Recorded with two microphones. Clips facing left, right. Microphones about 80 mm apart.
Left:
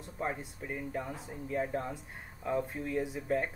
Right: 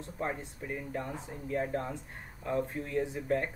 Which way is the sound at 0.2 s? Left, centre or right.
Centre.